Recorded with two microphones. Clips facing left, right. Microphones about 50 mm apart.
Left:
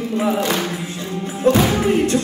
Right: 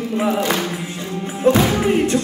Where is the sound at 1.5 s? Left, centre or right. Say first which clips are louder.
Even; centre.